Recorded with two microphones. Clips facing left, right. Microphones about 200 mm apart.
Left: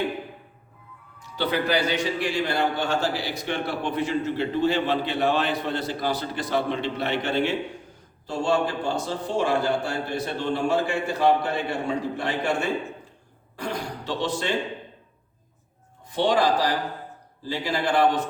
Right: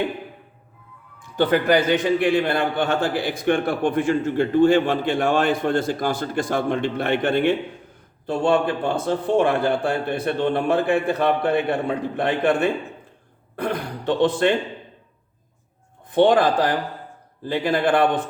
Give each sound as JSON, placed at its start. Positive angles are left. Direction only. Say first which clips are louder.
{"t": 1.2, "sound": "a man's voice", "louder": "right 6 dB", "side_deg": -50}
{"t": 16.0, "sound": "a man's voice", "louder": "right 5 dB", "side_deg": -55}